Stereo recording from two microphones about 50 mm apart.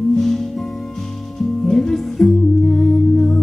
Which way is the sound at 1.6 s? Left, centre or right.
Centre.